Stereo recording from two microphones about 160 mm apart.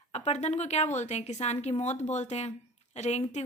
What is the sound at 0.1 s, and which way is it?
A woman's voice, 45° left (ahead or behind).